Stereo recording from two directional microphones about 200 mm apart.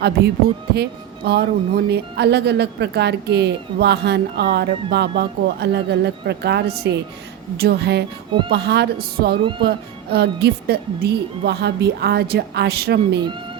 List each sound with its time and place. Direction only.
0.2 s speech: 55° right (ahead or behind)
9.4 s speech: 25° right (ahead or behind)
9.6 s speech: 55° right (ahead or behind)